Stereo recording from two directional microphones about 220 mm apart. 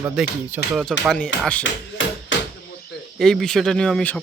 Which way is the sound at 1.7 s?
60° left (ahead or behind).